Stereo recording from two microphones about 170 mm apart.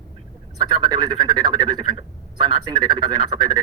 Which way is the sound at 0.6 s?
25° right (ahead or behind).